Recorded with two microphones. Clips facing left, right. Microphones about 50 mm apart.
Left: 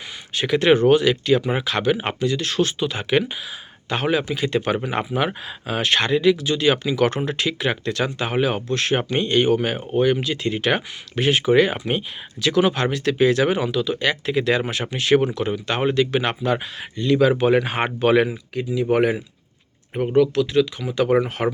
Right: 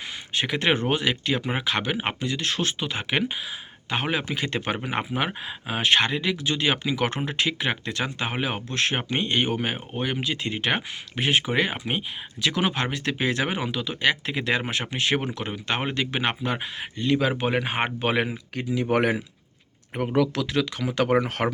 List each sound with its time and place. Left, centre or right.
0.3 s speech: right
4.3 s speech: right; by 12.0 s centre
12.4 s speech: right
18.5 s speech: right
20.5 s speech: right
21.2 s speech: right